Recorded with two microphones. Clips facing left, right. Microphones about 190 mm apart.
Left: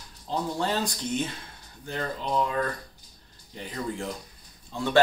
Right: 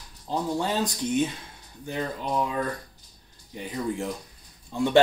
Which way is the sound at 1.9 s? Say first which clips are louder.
Right 1 dB; 10° right (ahead or behind).